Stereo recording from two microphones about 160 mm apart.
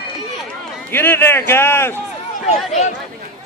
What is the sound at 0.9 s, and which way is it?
A man's voice, 15° left (ahead or behind).